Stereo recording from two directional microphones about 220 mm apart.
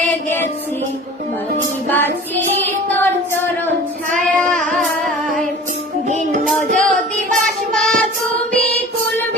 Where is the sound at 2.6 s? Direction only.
10° left (ahead or behind).